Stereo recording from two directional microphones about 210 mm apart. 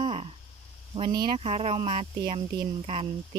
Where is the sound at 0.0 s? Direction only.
25° right (ahead or behind).